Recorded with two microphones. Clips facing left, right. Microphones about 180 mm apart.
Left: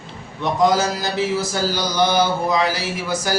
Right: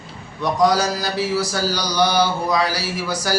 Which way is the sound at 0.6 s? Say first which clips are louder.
Even; 20° left (ahead or behind).